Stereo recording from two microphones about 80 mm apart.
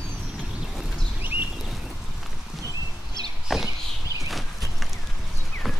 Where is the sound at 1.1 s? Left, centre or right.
Right.